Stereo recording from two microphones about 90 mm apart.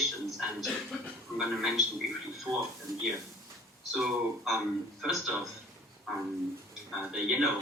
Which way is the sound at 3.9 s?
5° right (ahead or behind).